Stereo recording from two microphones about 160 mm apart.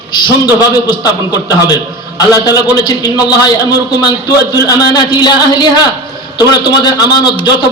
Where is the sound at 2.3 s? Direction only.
25° left (ahead or behind).